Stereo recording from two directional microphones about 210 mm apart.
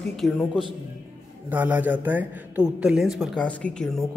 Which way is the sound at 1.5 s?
5° right (ahead or behind).